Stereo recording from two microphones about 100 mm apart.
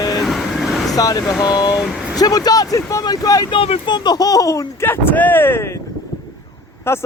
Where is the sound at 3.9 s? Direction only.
45° left (ahead or behind); by 5.8 s 25° left (ahead or behind).